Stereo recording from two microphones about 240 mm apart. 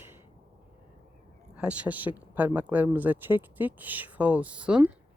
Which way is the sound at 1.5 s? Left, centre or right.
Centre.